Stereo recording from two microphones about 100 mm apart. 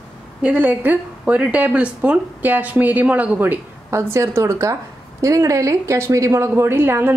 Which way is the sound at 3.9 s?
30° right (ahead or behind).